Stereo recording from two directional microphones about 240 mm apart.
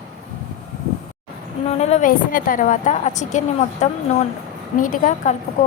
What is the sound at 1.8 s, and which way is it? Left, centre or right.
A woman's voice, left.